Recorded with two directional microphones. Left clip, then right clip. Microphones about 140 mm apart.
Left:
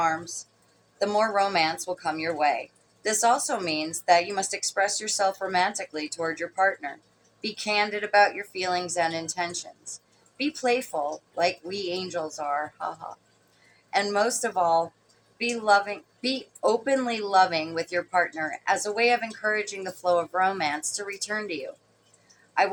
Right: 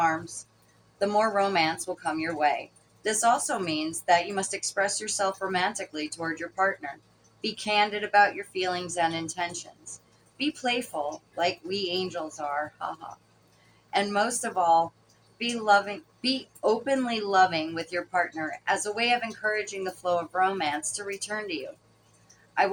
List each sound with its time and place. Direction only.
0.0 s a woman's voice: 35° left (ahead or behind)
13.9 s a woman's voice: 40° left (ahead or behind)